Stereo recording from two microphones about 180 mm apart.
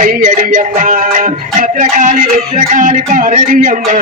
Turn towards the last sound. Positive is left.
turn(degrees=-45)  # may be behind; listen again after turning